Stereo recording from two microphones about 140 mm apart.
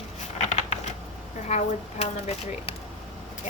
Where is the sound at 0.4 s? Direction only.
50° left (ahead or behind).